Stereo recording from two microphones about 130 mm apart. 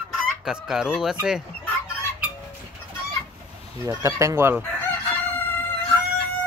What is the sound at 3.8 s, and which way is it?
Speech, 25° right (ahead or behind).